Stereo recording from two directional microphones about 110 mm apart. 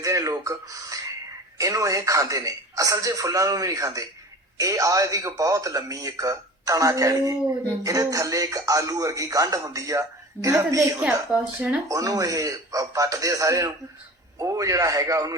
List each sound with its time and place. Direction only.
0.0 s speech: 30° right (ahead or behind)
11.0 s speech: 10° right (ahead or behind)
11.9 s speech: 30° right (ahead or behind)